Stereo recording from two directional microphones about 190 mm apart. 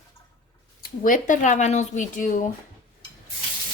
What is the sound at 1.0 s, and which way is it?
Speech, 45° left (ahead or behind).